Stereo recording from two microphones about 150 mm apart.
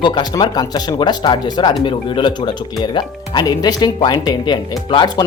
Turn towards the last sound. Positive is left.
turn(degrees=30)  # may be behind; listen again after turning